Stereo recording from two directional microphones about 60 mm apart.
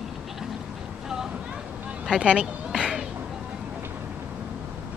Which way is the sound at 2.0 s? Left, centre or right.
Centre.